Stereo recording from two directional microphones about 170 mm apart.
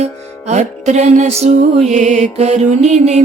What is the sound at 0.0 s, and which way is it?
Music, 45° right (ahead or behind).